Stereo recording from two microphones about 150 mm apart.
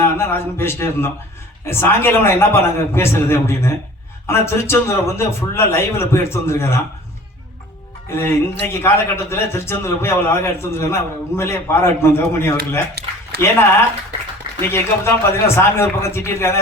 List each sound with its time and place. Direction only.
0.0 s a man's voice: 15° left (ahead or behind)
8.1 s a man's voice: 15° left (ahead or behind)
13.0 s speech: 90° right
14.7 s a man's voice: 15° left (ahead or behind)